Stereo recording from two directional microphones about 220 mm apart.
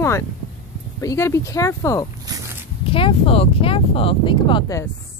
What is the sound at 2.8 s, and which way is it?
Speech, 25° left (ahead or behind).